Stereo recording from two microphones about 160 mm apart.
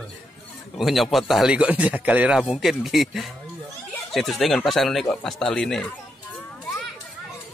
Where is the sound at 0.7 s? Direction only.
Centre (ahead or behind).